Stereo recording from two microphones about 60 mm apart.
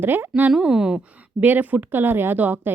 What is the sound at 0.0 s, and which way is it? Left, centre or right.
Speech, right.